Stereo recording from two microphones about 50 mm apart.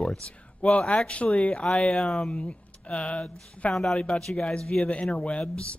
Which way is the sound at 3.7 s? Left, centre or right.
Centre.